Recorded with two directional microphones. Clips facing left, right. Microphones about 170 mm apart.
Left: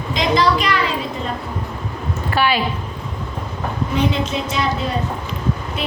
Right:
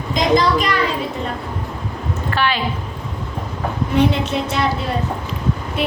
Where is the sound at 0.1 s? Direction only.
45° right (ahead or behind).